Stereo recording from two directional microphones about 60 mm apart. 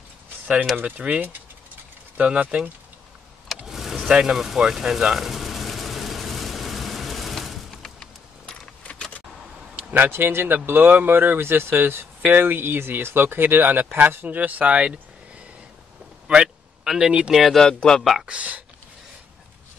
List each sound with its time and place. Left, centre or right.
0.8 s speech: right
3.6 s vehicle: centre
4.1 s a sound: centre
9.8 s speech: right
16.3 s a sound: centre
17.3 s speech: centre
17.6 s speech: centre
18.2 s speech: right